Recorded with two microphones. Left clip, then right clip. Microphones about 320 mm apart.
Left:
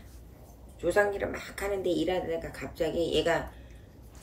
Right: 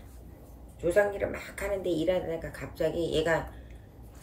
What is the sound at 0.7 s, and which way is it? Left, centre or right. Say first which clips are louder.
A woman's voice: right 1 dB; centre.